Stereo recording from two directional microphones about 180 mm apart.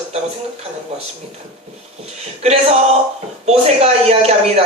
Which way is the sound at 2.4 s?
35° right (ahead or behind).